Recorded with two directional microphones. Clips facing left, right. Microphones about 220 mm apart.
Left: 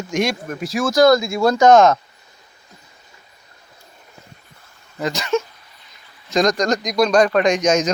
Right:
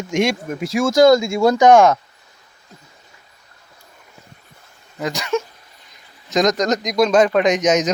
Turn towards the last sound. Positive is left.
turn(degrees=-20)  # may be behind; listen again after turning